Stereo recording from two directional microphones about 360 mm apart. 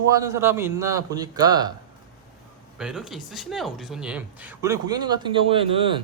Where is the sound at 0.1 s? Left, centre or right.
Centre.